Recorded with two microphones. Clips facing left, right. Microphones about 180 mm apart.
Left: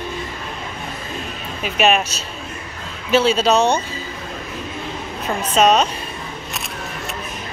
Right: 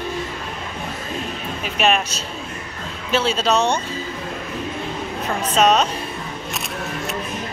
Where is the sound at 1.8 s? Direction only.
5° left (ahead or behind).